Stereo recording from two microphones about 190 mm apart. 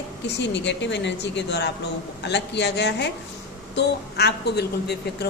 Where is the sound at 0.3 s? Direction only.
65° left (ahead or behind).